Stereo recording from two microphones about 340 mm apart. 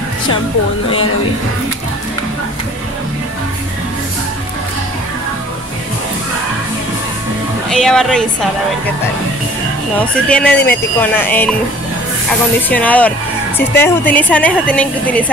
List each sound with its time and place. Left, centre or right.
7.7 s a woman's voice: centre
9.9 s a woman's voice: centre
12.5 s a woman's voice: centre